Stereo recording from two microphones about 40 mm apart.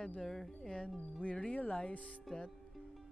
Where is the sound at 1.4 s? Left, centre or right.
Left.